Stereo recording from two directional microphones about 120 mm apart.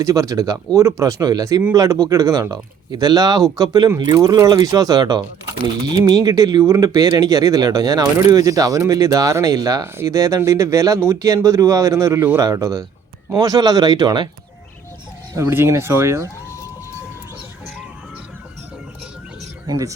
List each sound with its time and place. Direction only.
0.0 s speech: 30° right (ahead or behind)
15.4 s speech: 20° right (ahead or behind)
19.6 s speech: 35° right (ahead or behind)